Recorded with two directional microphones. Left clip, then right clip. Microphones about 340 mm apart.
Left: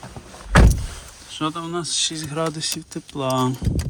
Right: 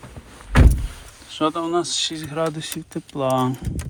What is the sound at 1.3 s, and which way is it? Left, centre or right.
Speech, centre.